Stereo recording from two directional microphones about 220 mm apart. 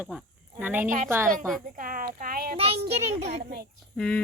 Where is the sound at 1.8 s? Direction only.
40° right (ahead or behind).